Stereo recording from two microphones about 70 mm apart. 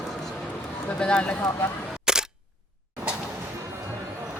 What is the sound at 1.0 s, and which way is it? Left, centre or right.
Speech, centre.